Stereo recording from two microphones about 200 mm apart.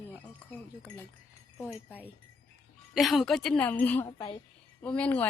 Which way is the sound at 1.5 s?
15° left (ahead or behind).